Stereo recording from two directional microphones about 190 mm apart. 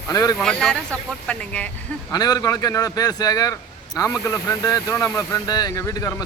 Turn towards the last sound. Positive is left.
turn(degrees=15)  # may be behind; listen again after turning